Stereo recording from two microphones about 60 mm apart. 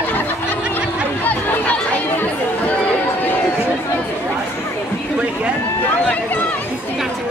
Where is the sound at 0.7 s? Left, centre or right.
Left.